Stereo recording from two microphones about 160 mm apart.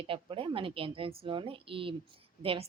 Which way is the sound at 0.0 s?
35° right (ahead or behind).